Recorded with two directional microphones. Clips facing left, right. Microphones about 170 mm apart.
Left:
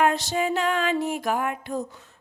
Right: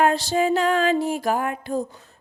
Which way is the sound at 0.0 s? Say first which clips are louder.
Right 3 dB; 35° right (ahead or behind).